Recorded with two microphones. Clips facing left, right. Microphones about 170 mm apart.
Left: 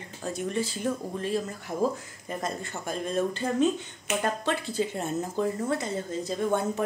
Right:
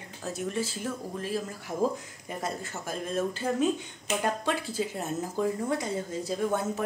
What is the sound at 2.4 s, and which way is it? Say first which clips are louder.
Speech: left 1 dB; centre (ahead or behind).